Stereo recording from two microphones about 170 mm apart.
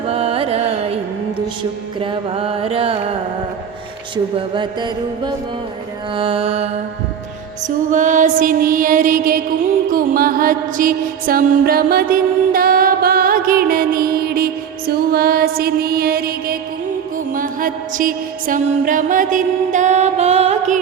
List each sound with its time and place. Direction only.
0.1 s carnatic music: 35° right (ahead or behind)
2.0 s music: 30° right (ahead or behind)
4.4 s mantra: 30° right (ahead or behind)
6.1 s music: 30° right (ahead or behind)
7.9 s mantra: 50° right (ahead or behind)
9.9 s music: 55° right (ahead or behind); by 20.7 s 40° right (ahead or behind)